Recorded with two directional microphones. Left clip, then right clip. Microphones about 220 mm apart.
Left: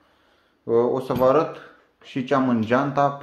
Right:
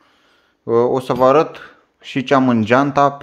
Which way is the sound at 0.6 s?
50° right (ahead or behind).